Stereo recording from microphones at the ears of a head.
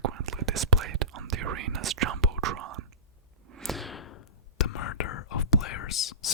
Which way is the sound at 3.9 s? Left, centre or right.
Left.